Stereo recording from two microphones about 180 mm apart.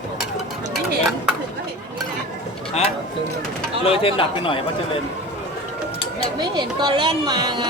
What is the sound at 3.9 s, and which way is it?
Speech, 30° left (ahead or behind).